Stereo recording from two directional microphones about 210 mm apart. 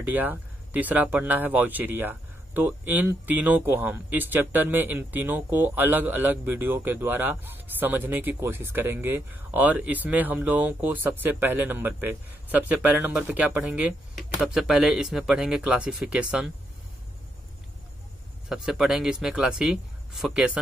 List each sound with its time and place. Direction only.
0.0 s speech: 10° right (ahead or behind)
18.5 s speech: centre (ahead or behind)